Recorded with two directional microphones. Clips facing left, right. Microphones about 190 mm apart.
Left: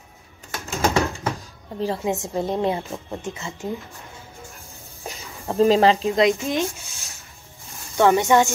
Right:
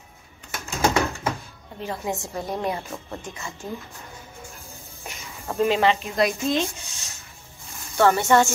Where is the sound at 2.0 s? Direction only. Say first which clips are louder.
Left 5 dB; 20° left (ahead or behind).